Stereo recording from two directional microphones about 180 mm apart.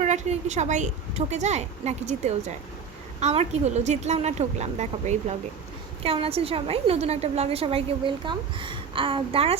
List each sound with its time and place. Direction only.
0.0 s a woman's voice: 40° right (ahead or behind)